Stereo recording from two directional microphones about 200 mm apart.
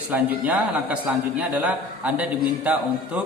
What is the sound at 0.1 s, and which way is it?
Speech, 5° right (ahead or behind).